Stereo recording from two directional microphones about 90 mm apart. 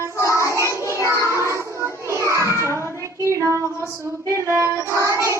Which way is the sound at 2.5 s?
30° left (ahead or behind).